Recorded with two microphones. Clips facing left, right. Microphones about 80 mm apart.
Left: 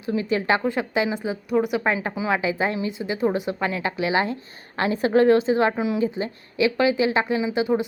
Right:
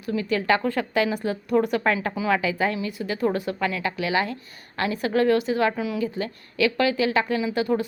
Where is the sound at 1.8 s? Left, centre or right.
Left.